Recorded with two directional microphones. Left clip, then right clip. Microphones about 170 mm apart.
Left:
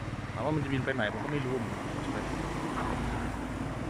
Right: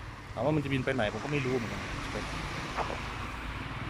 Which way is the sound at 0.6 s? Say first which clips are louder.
Right 1 dB; 5° right (ahead or behind).